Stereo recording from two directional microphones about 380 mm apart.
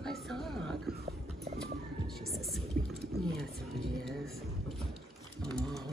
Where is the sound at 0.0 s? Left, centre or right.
Centre.